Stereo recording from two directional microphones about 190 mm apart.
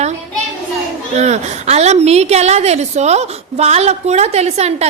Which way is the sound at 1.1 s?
35° right (ahead or behind).